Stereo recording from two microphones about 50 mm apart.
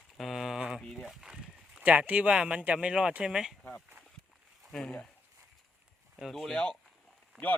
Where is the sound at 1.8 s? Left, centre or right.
Right; by 3.5 s centre.